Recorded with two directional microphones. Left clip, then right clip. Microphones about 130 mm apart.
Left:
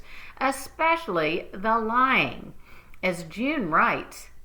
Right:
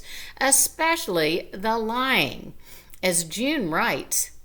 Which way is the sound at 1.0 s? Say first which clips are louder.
Right 2 dB; 30° right (ahead or behind).